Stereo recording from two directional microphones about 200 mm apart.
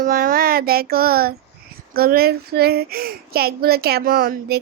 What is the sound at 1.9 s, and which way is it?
Speech, 50° right (ahead or behind).